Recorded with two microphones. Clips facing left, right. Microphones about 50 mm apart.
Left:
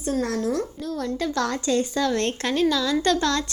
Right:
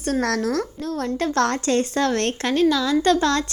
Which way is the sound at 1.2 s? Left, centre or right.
Right.